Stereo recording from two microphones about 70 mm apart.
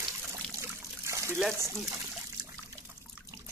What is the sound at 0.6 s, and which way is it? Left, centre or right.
Trickle, right.